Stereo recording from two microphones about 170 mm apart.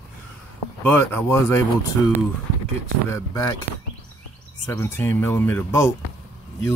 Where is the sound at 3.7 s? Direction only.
45° right (ahead or behind).